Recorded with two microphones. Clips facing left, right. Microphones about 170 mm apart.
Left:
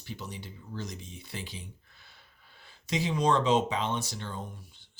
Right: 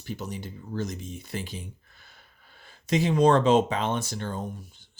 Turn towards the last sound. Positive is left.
turn(degrees=-45)  # may be behind; listen again after turning